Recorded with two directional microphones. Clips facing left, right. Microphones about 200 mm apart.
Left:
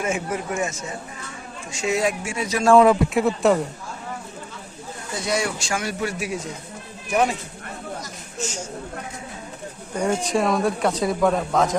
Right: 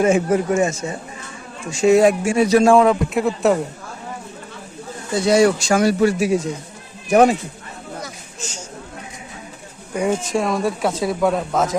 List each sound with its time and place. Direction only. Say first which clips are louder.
0.0 s speech: right 9 dB; 35° right (ahead or behind)
1.8 s speech: right 10 dB; 45° right (ahead or behind)
2.7 s speech: even; centre (ahead or behind)
5.2 s speech: right 11 dB; 35° right (ahead or behind)
7.1 s speech: right 8 dB; 45° right (ahead or behind)
9.9 s speech: right 2 dB; 5° right (ahead or behind)